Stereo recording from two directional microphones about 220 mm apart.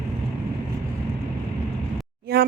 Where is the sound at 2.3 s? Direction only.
45° right (ahead or behind).